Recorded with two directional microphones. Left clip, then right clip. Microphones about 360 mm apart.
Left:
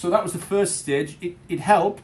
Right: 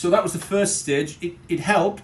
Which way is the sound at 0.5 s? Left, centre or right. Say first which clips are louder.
Even; centre.